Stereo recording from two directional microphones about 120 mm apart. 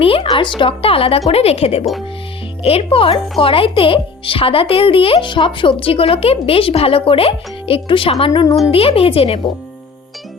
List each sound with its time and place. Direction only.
0.0 s speech: 50° left (ahead or behind)
8.3 s speech: 30° left (ahead or behind)
8.7 s speech: 55° left (ahead or behind)